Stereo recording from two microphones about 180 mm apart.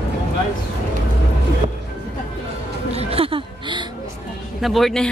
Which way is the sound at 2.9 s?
35° right (ahead or behind).